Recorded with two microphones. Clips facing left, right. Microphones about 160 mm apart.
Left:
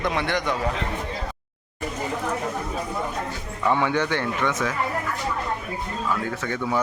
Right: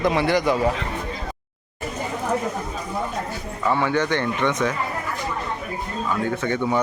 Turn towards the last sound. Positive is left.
turn(degrees=5)  # may be behind; listen again after turning